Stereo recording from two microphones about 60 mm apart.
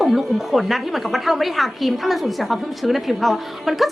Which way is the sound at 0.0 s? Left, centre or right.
Centre.